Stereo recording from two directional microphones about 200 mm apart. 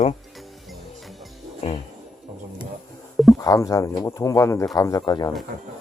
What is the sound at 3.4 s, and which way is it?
Speech, 15° left (ahead or behind).